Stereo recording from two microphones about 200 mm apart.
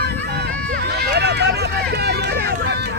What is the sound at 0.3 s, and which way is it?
Run, 55° right (ahead or behind).